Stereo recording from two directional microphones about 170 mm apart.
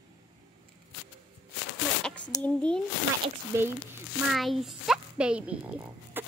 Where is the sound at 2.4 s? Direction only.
5° left (ahead or behind).